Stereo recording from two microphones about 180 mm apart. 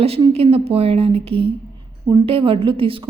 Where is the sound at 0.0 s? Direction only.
35° right (ahead or behind).